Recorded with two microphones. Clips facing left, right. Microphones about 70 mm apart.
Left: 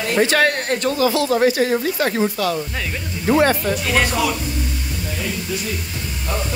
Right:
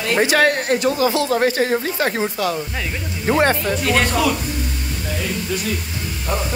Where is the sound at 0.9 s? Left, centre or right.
Right.